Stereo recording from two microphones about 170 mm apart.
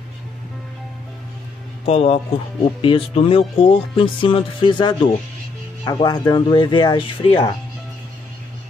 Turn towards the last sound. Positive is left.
turn(degrees=30)  # may be behind; listen again after turning